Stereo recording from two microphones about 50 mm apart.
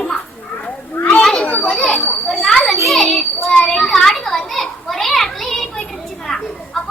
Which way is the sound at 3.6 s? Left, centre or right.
Centre.